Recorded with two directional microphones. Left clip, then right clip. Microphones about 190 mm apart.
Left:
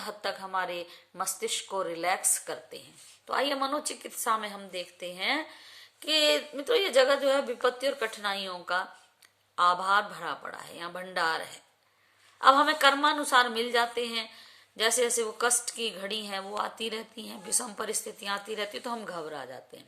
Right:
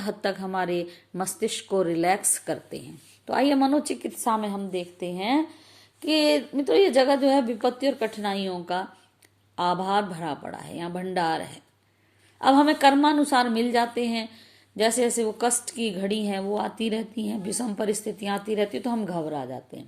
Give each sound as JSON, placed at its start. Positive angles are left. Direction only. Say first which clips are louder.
{"t": 0.0, "sound": "a woman's voice", "louder": "right 6 dB", "side_deg": -15}